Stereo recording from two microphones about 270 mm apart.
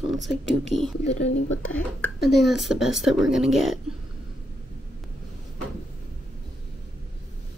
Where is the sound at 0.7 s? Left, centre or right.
Left.